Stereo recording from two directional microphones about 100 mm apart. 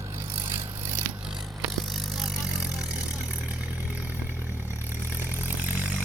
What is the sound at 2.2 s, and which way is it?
Vehicle, 5° right (ahead or behind).